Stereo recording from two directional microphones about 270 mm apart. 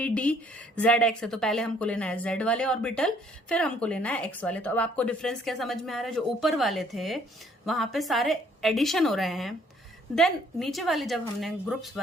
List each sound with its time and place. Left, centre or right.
0.0 s a woman's voice: centre